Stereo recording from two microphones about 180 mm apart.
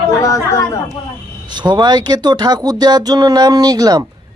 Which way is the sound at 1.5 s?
25° right (ahead or behind).